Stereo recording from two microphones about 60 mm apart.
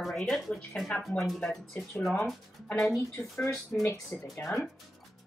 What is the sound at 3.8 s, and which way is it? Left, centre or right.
Speech, left.